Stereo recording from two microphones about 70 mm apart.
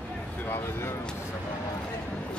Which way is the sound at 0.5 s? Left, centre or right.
Left.